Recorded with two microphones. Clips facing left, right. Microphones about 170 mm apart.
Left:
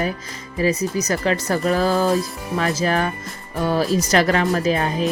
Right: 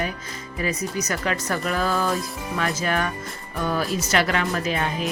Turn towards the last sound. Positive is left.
turn(degrees=35)  # may be behind; listen again after turning